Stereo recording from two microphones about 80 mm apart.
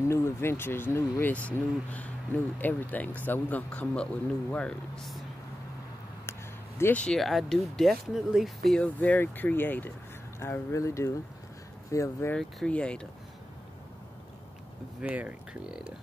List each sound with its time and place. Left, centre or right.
0.1 s speech: left
1.3 s speech: centre
6.9 s speech: centre
7.2 s speech: centre
8.7 s speech: centre
10.4 s speech: left
12.4 s speech: centre
15.0 s speech: centre